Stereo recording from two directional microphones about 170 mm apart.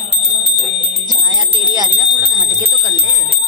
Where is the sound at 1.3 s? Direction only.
25° right (ahead or behind).